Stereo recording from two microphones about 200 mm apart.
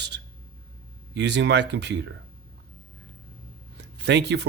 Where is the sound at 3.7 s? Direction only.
55° right (ahead or behind).